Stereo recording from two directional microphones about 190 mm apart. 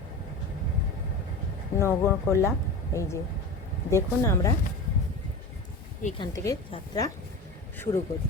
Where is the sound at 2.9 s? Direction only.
15° left (ahead or behind).